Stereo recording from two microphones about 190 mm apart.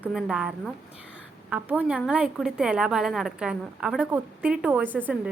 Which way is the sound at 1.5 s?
5° right (ahead or behind).